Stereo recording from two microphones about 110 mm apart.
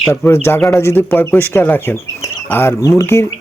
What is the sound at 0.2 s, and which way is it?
Speech, 25° left (ahead or behind).